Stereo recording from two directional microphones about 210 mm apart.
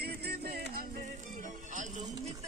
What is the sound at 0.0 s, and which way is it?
Music, 50° right (ahead or behind).